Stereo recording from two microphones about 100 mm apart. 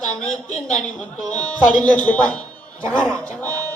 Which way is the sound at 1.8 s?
15° left (ahead or behind).